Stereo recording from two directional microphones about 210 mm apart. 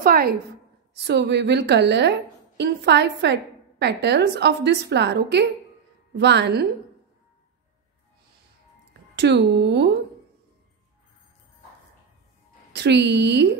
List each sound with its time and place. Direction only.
0.0 s a woman's voice: 45° right (ahead or behind)
9.1 s speech: 55° right (ahead or behind)
12.7 s speech: 55° right (ahead or behind)